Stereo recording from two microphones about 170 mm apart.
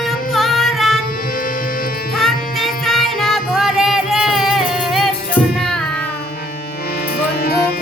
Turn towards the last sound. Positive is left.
turn(degrees=70)  # may be behind; listen again after turning